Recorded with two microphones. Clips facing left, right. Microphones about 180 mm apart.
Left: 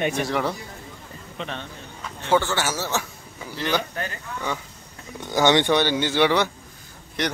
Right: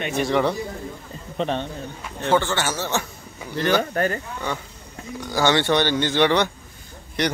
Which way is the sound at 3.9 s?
50° right (ahead or behind).